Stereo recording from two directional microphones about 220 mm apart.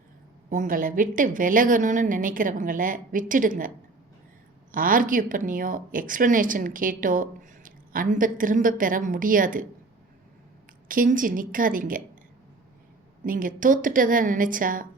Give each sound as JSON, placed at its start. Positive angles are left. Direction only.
{"t": 0.5, "sound": "a woman's voice", "side_deg": -35}
{"t": 4.7, "sound": "a woman's voice", "side_deg": -40}
{"t": 10.8, "sound": "a woman's voice", "side_deg": -40}
{"t": 13.2, "sound": "a woman's voice", "side_deg": -40}